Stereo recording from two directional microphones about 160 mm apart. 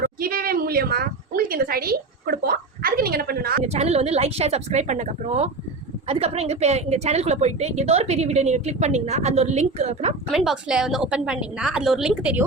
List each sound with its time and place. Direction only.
0.0 s a sound: 65° right (ahead or behind)
3.6 s a woman's voice: 45° right (ahead or behind)
10.2 s a woman's voice: centre (ahead or behind)